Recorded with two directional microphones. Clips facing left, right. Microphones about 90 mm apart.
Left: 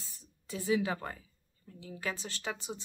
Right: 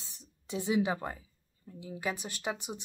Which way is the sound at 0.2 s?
20° right (ahead or behind).